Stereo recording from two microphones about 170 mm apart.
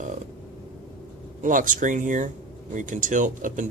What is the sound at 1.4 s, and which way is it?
Speech, 50° right (ahead or behind).